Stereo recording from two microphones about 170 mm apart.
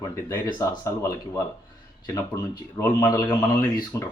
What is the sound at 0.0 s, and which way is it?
Speech, 20° left (ahead or behind).